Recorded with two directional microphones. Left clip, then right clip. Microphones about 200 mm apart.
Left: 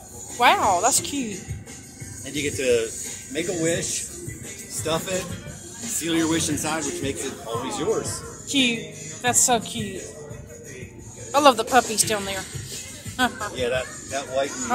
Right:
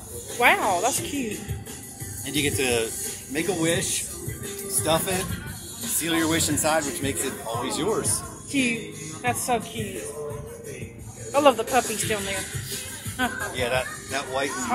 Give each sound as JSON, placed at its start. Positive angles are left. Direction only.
{"t": 0.4, "sound": "speech", "side_deg": 10}
{"t": 2.2, "sound": "speech", "side_deg": -40}
{"t": 3.3, "sound": "speech", "side_deg": -50}
{"t": 4.8, "sound": "speech", "side_deg": -40}
{"t": 5.9, "sound": "speech", "side_deg": -30}
{"t": 7.6, "sound": "speech", "side_deg": -45}
{"t": 8.5, "sound": "a woman's voice", "side_deg": 10}
{"t": 11.3, "sound": "speech", "side_deg": 15}
{"t": 13.6, "sound": "speech", "side_deg": -45}